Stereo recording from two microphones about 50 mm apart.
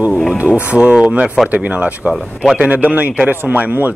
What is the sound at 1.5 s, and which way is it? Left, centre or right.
A man's voice, right.